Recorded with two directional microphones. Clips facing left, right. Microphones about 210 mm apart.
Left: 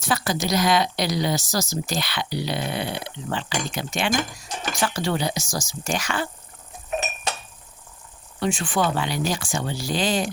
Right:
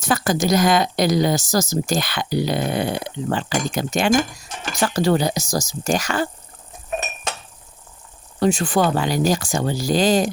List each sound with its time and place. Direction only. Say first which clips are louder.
0.0 s speech: right 5 dB; 45° right (ahead or behind)
8.4 s speech: right 5 dB; 40° right (ahead or behind)